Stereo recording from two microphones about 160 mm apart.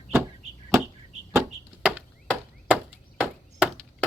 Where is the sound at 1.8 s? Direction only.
5° right (ahead or behind).